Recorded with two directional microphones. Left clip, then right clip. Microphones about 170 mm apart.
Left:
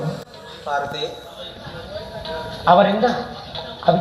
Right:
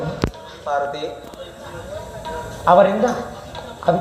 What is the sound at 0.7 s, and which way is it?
Speech, 35° left (ahead or behind).